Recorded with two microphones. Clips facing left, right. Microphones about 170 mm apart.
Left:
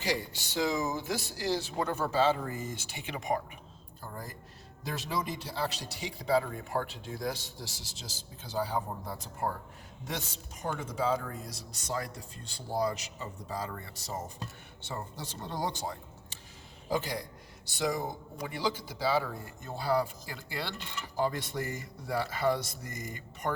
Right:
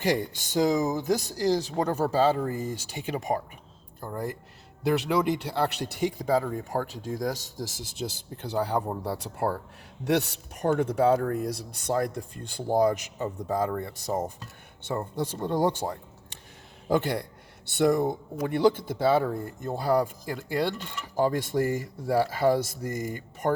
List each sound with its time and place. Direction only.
0.0 s speech: 50° right (ahead or behind)
4.8 s a man's voice: 70° right (ahead or behind); by 15.7 s 55° right (ahead or behind)
16.9 s speech: 65° right (ahead or behind)